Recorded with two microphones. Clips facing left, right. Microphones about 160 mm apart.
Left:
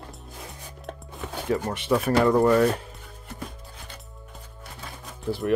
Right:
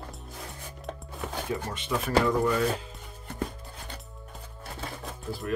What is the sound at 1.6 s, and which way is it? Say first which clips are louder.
Speech: left 7 dB; 65° left (ahead or behind).